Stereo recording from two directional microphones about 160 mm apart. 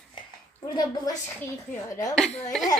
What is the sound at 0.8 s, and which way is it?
Speech, 25° left (ahead or behind).